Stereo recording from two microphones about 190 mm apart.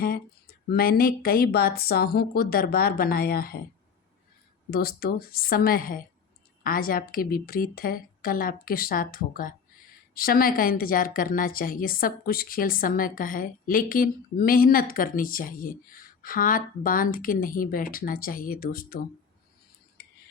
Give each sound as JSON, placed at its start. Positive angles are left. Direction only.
{"t": 0.7, "sound": "a woman's voice", "side_deg": 50}
{"t": 4.7, "sound": "a woman's voice", "side_deg": 55}